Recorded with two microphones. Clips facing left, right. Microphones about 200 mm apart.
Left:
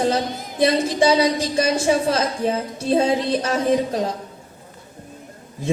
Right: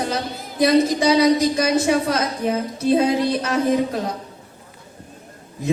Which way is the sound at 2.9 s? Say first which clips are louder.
Right 1 dB; 30° left (ahead or behind).